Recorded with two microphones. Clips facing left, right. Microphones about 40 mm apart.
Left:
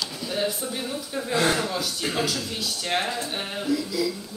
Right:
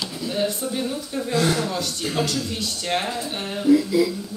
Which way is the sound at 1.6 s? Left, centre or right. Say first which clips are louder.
Right 1 dB; centre.